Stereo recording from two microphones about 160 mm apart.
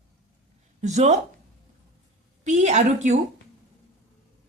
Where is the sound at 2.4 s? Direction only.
45° right (ahead or behind).